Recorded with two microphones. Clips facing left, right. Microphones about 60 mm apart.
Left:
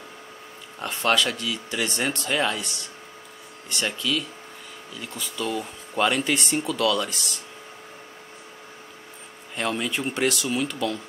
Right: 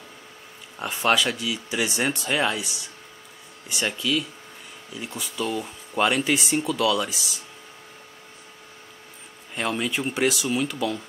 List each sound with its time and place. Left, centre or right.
0.7 s speech: centre
4.9 s speech: centre
5.2 s speech: centre
9.6 s speech: centre